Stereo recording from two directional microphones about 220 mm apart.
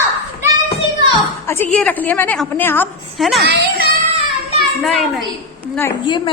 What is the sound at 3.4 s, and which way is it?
Speech, 50° right (ahead or behind).